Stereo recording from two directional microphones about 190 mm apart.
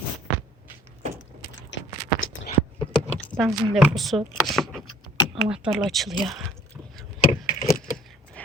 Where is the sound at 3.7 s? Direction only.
Centre (ahead or behind).